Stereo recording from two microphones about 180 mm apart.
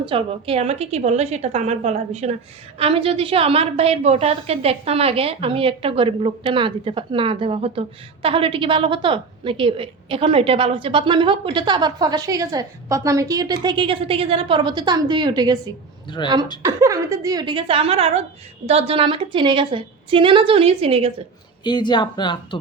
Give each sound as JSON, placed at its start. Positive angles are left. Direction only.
{"t": 0.0, "sound": "a woman's voice", "side_deg": -30}
{"t": 16.0, "sound": "speech", "side_deg": 25}
{"t": 16.6, "sound": "a woman's voice", "side_deg": -15}
{"t": 21.6, "sound": "speech", "side_deg": 25}